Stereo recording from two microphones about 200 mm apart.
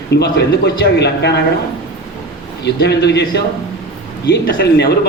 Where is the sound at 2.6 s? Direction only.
55° left (ahead or behind).